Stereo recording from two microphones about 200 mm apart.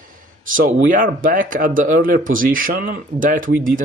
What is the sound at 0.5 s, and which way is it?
Speech, 45° right (ahead or behind).